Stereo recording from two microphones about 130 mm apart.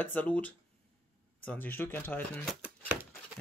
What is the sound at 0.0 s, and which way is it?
Speech, 10° left (ahead or behind).